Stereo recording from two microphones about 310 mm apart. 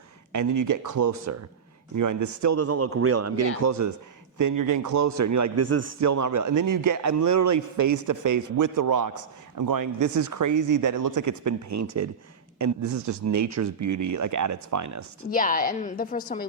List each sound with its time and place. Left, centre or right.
0.3 s a man's voice: right
2.0 s speech: right
4.4 s a man's voice: right
15.3 s a woman's voice: left